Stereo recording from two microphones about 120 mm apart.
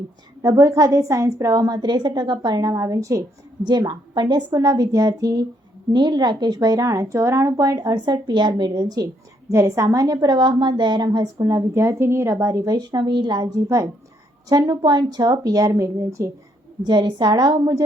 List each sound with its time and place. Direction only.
0.4 s a woman's voice: 30° right (ahead or behind)
16.8 s a woman's voice: 35° right (ahead or behind)